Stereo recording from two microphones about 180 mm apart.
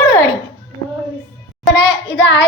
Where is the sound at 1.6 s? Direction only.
80° left.